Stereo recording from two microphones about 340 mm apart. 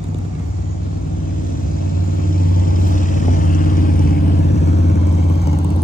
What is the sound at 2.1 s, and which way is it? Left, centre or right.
Vehicle, left.